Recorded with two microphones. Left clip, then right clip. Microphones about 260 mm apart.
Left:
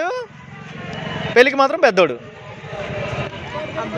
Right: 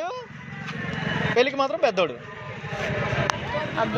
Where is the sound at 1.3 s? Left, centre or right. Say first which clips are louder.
Left 10 dB; left.